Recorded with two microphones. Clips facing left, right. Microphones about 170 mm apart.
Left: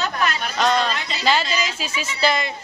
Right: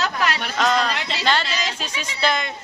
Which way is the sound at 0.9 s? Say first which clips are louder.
Right 1 dB; 75° right (ahead or behind).